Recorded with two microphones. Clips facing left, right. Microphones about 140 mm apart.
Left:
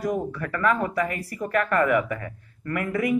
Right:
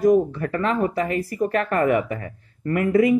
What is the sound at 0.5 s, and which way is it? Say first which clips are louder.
Speech: right 2 dB; 25° right (ahead or behind).